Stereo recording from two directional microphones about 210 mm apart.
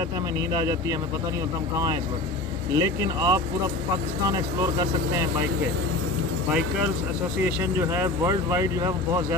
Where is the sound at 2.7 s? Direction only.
15° right (ahead or behind).